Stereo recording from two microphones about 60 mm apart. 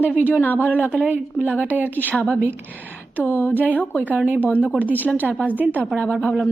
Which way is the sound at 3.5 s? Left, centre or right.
Right.